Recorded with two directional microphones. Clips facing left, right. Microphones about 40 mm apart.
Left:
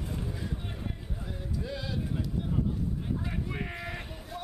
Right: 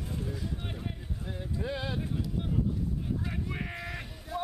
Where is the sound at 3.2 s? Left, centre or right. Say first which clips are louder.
Left 1 dB; centre.